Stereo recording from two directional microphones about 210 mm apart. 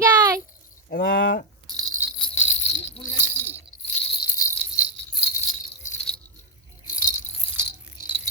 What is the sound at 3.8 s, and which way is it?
Jingle bell, 35° left (ahead or behind).